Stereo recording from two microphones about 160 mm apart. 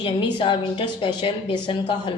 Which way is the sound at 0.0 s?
30° left (ahead or behind).